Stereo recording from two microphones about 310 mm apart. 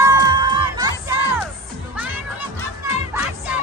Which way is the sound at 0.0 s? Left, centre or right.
Centre.